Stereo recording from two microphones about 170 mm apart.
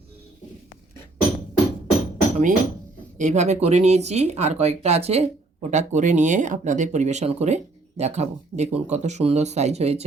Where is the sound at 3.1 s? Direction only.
45° right (ahead or behind).